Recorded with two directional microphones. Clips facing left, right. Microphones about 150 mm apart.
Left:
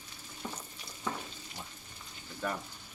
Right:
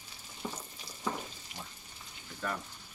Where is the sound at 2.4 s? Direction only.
15° left (ahead or behind).